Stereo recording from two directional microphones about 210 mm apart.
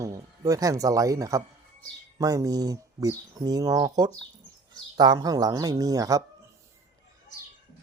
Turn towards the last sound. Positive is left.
turn(degrees=-15)  # may be behind; listen again after turning